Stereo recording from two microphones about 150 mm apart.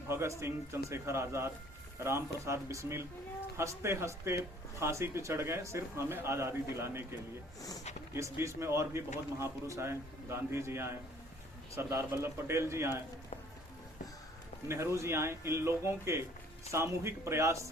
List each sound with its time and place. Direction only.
0.1 s a man's voice: 20° right (ahead or behind)
14.7 s a man's voice: 20° right (ahead or behind)